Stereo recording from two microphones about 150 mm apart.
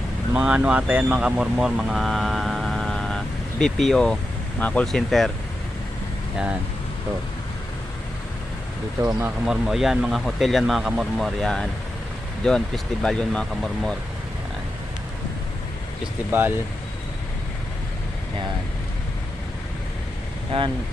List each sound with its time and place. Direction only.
0.3 s speech: 5° right (ahead or behind)
9.5 s speech: centre (ahead or behind)
16.3 s speech: 15° right (ahead or behind)
20.5 s speech: 40° right (ahead or behind)